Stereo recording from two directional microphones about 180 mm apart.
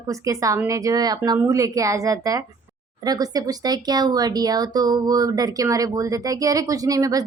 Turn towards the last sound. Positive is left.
turn(degrees=-20)  # may be behind; listen again after turning